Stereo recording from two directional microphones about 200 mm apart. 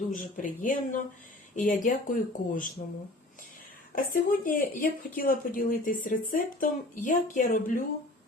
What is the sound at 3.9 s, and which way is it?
Speech, 45° left (ahead or behind).